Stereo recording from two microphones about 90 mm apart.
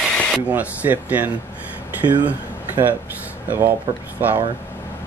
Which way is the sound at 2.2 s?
20° right (ahead or behind).